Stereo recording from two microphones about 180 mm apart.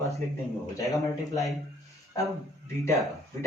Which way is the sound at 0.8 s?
20° left (ahead or behind).